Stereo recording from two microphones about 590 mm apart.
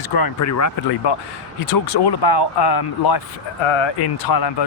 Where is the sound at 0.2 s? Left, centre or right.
Left.